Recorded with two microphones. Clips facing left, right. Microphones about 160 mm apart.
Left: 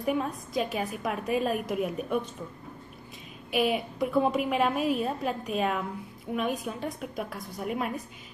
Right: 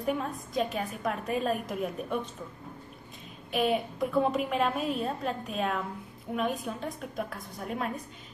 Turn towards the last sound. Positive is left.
turn(degrees=5)  # may be behind; listen again after turning